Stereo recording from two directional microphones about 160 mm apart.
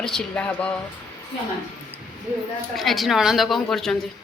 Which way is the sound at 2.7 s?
Centre (ahead or behind).